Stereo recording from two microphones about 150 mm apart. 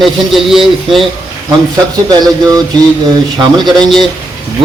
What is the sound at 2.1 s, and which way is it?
A man's voice, 25° right (ahead or behind).